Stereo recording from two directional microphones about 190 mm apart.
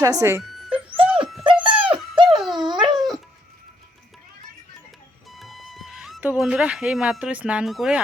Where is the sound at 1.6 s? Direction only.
25° right (ahead or behind).